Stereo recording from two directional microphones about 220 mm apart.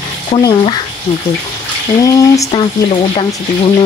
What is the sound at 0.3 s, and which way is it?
Speech, 20° left (ahead or behind).